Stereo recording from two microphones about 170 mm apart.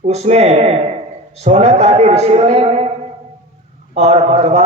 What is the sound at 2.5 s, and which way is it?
Speech, 40° right (ahead or behind).